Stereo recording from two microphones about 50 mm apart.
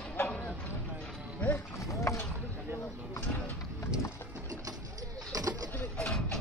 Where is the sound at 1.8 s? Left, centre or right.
Left.